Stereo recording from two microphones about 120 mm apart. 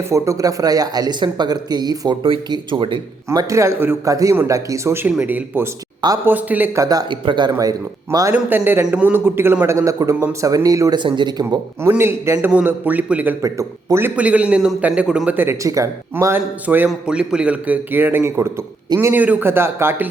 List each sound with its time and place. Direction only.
0.1 s speech: 25° right (ahead or behind)
3.2 s a man's voice: 25° right (ahead or behind)
6.7 s speech: 30° right (ahead or behind)
8.3 s a man's voice: 15° right (ahead or behind)
11.0 s speech: 40° right (ahead or behind)
11.8 s a man's voice: 20° right (ahead or behind)
13.4 s speech: 25° right (ahead or behind)
14.2 s a man's voice: 10° right (ahead or behind)
15.6 s a man's voice: 25° right (ahead or behind)